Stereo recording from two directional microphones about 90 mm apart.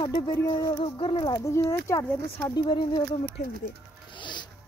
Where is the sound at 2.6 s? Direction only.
65° left (ahead or behind).